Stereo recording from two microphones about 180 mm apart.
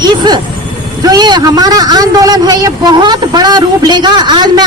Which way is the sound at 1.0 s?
20° right (ahead or behind).